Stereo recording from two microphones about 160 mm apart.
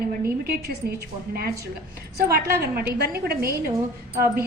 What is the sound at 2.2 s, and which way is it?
Speech, 70° right (ahead or behind).